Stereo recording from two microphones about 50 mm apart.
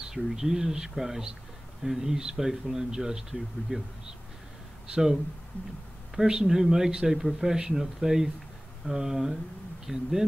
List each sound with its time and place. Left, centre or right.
0.1 s speech: centre
6.1 s speech: centre